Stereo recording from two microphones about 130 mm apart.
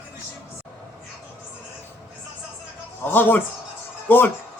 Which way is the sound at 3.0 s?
15° left (ahead or behind).